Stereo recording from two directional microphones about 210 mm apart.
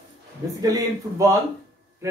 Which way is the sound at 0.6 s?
15° right (ahead or behind).